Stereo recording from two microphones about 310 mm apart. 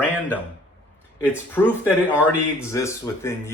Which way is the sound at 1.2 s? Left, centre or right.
Centre.